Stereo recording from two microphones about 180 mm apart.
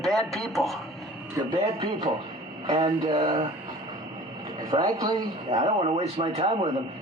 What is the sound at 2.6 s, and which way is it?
Speech, 25° right (ahead or behind).